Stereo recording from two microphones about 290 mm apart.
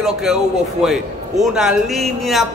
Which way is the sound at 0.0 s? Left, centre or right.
Centre.